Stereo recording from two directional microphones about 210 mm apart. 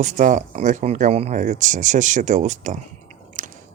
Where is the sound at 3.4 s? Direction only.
35° right (ahead or behind).